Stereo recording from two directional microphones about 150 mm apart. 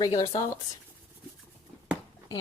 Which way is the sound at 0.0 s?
25° left (ahead or behind).